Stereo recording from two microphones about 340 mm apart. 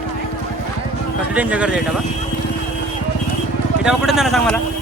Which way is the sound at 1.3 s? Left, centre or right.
Centre.